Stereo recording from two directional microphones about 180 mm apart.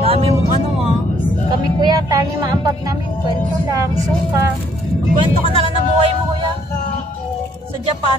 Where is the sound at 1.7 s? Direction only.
20° right (ahead or behind).